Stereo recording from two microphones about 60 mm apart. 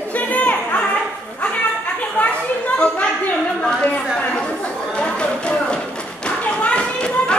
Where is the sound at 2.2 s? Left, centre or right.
Left.